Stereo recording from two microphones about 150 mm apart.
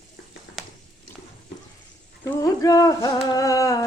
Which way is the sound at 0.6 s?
Centre (ahead or behind).